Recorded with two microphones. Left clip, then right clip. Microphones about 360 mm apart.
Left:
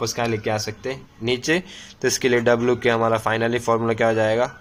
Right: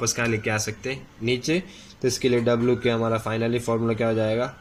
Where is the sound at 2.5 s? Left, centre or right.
Left.